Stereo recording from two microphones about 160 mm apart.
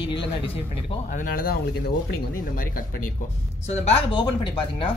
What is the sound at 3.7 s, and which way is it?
Speech, 45° left (ahead or behind).